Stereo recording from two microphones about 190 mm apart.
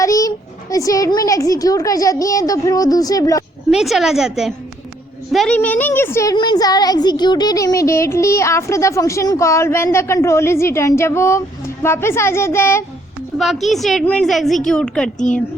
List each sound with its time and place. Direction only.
0.0 s a child's voice: 20° left (ahead or behind)
3.7 s a woman's voice: centre (ahead or behind); by 12.8 s 15° left (ahead or behind)
13.4 s a woman's voice: centre (ahead or behind)